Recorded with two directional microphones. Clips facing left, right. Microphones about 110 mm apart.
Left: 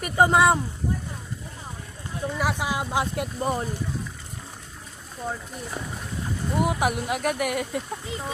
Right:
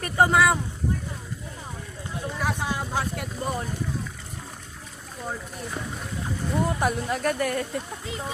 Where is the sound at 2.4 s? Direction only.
10° left (ahead or behind).